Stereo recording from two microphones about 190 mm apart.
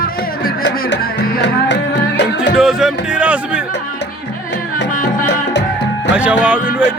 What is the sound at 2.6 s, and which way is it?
Speech, 5° right (ahead or behind).